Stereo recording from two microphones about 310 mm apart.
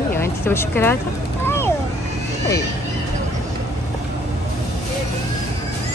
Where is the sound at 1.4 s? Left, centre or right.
Centre.